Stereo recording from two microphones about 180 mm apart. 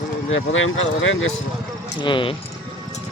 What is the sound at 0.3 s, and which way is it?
Speech, 90° left.